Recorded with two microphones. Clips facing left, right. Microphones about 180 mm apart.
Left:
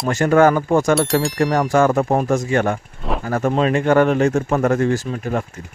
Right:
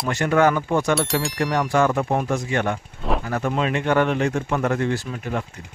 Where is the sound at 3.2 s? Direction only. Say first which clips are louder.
Left 8 dB; 45° left (ahead or behind).